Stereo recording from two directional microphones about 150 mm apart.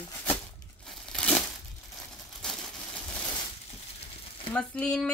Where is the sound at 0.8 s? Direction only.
5° left (ahead or behind).